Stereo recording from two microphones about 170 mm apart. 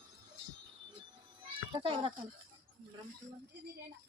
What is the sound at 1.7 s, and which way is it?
Speech, 30° right (ahead or behind).